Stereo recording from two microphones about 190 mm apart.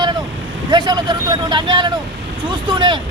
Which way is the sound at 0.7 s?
20° right (ahead or behind).